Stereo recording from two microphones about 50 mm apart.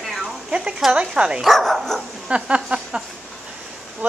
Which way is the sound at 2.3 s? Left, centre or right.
Right.